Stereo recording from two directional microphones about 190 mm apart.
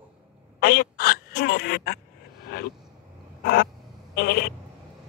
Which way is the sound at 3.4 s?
55° left (ahead or behind).